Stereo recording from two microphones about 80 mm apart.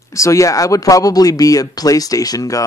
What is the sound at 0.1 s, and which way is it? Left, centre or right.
Speech, left.